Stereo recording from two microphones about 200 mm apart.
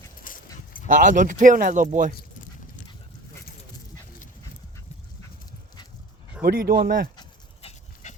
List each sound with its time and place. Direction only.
0.2 s dog: 45° left (ahead or behind)
0.9 s speech: 40° right (ahead or behind)
6.4 s speech: 50° right (ahead or behind)
7.2 s dog: 30° left (ahead or behind)